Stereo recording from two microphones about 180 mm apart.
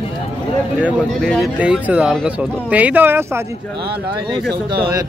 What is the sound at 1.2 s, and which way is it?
Speech, 5° left (ahead or behind).